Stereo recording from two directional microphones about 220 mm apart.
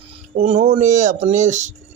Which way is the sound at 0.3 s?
30° right (ahead or behind).